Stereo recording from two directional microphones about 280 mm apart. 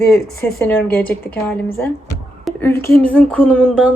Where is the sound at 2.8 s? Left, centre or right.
Centre.